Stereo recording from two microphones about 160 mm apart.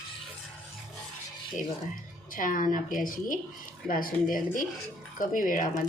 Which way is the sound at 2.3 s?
55° left (ahead or behind).